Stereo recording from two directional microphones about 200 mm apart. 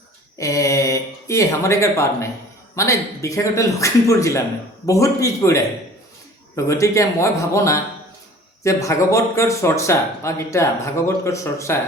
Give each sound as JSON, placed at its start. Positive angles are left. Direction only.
{"t": 0.3, "sound": "speech", "side_deg": 15}